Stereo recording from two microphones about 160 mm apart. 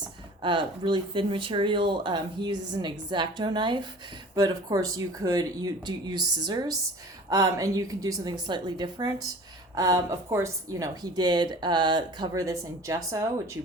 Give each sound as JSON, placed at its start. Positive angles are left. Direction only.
{"t": 0.4, "sound": "a woman's voice", "side_deg": -30}